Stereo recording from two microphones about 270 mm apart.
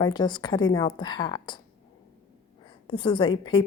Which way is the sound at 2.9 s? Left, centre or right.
Centre.